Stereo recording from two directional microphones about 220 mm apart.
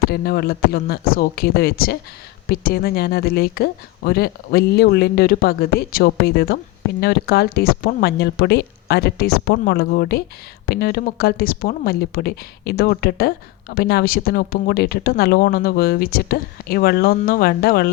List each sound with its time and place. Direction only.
0.0 s speech: 45° left (ahead or behind)